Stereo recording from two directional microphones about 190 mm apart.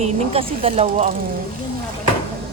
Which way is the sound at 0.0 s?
30° right (ahead or behind).